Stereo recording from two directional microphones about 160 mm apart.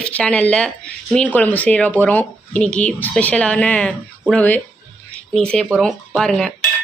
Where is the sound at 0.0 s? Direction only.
5° left (ahead or behind).